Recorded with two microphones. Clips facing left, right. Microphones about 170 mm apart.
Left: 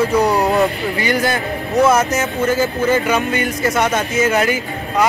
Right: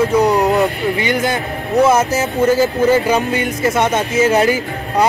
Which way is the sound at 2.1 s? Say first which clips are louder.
Right 3 dB; 35° right (ahead or behind).